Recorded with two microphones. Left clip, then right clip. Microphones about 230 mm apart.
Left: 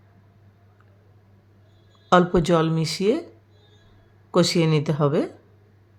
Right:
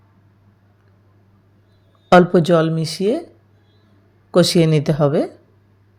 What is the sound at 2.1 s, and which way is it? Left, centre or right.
Speech, centre.